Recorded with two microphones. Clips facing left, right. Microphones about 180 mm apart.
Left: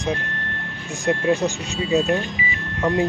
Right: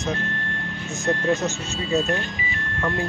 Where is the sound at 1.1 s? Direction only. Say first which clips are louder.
Left 3 dB; 15° left (ahead or behind).